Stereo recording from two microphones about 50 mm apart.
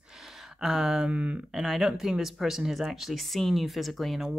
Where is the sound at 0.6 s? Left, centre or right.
Centre.